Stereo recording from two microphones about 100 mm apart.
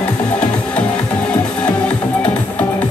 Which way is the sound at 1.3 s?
10° left (ahead or behind).